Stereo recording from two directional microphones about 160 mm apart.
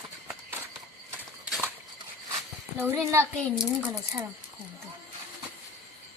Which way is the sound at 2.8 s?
15° right (ahead or behind).